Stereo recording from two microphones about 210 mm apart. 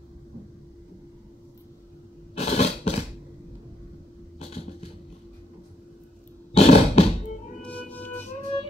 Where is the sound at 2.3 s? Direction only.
30° left (ahead or behind).